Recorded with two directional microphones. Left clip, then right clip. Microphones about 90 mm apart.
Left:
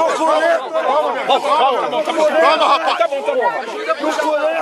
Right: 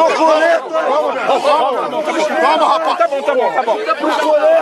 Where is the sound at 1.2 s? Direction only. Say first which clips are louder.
Right 1 dB; 25° left (ahead or behind).